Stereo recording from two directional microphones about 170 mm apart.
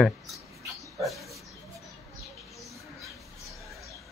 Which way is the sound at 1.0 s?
Centre (ahead or behind).